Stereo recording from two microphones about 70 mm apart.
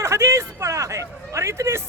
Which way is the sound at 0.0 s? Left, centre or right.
Right.